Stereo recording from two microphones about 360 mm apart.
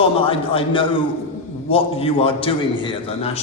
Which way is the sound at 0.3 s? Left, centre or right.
Centre.